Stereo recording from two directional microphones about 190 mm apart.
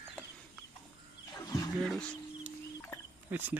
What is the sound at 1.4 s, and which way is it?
Roaring cats, 20° left (ahead or behind).